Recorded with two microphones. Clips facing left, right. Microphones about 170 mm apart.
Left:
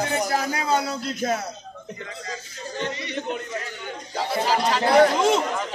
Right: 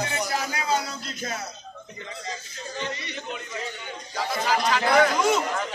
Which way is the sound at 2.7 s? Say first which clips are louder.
Left 5 dB; 50° left (ahead or behind).